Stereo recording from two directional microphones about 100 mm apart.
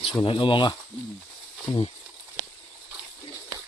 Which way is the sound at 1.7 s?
75° left (ahead or behind).